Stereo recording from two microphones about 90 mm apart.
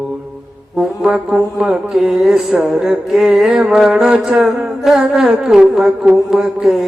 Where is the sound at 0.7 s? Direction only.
10° right (ahead or behind).